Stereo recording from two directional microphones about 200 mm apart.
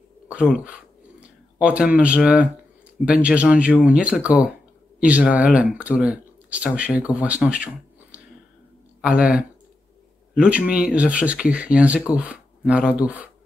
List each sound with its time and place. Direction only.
0.3 s speech: 5° right (ahead or behind)